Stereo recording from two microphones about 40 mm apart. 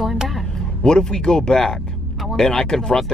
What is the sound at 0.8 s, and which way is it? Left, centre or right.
Speech, centre.